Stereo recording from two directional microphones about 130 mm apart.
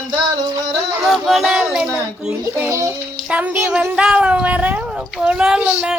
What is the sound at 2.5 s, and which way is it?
Speech, 20° right (ahead or behind).